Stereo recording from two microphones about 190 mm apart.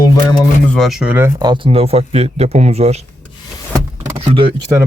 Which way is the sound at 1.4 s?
25° right (ahead or behind).